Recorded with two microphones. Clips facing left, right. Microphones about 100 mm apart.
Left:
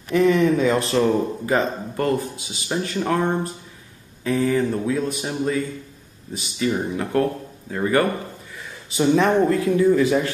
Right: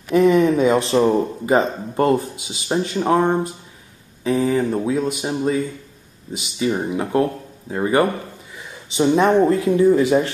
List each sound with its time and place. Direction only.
0.1 s speech: 25° right (ahead or behind)
6.6 s speech: 15° right (ahead or behind)
9.0 s speech: 25° right (ahead or behind)